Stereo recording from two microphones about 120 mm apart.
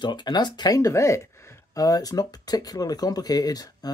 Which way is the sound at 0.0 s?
40° left (ahead or behind).